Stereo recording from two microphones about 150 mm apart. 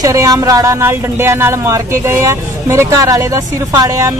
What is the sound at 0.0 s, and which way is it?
Speech, 25° right (ahead or behind).